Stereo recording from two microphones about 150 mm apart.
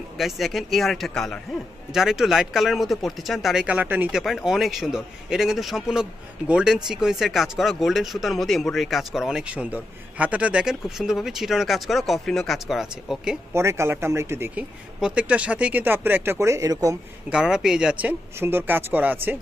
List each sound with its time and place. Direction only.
0.2 s a man's voice: centre (ahead or behind)
4.2 s a man's voice: centre (ahead or behind)
13.5 s speech: 15° right (ahead or behind)
17.3 s speech: 5° right (ahead or behind)